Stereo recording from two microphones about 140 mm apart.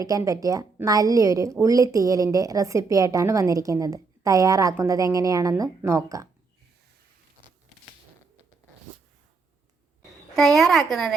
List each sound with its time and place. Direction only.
0.0 s a woman's voice: 25° right (ahead or behind)
10.3 s a child's voice: centre (ahead or behind)